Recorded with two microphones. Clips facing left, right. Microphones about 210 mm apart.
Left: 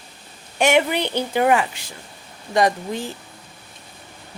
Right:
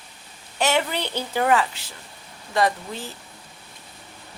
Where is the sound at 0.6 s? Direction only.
15° left (ahead or behind).